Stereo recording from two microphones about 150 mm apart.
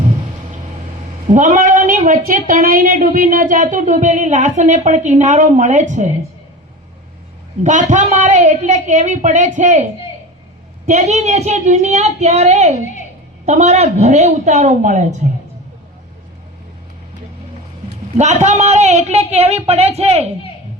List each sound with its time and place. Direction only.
1.3 s a woman's voice: 55° right (ahead or behind)
7.6 s a woman's voice: 55° right (ahead or behind)
10.8 s speech: 50° right (ahead or behind)
18.2 s speech: 50° right (ahead or behind)